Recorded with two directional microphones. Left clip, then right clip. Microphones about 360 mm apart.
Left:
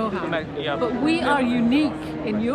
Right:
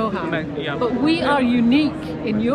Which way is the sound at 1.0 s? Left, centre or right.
Centre.